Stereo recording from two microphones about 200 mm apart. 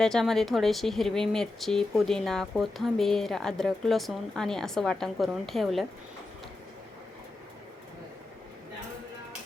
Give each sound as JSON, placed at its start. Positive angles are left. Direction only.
{"t": 0.0, "sound": "speech", "side_deg": 0}